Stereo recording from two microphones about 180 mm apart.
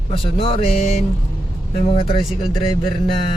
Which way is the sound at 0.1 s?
30° left (ahead or behind).